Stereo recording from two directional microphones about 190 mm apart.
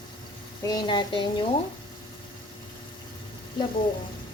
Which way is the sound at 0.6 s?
20° left (ahead or behind).